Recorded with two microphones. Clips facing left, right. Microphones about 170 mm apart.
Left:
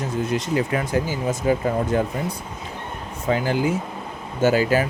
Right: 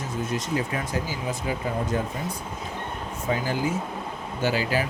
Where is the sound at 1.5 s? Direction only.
45° left (ahead or behind).